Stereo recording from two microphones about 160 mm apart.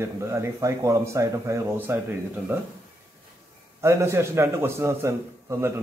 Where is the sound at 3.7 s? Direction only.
15° right (ahead or behind).